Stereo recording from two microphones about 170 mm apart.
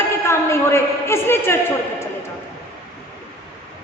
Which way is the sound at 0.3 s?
15° left (ahead or behind).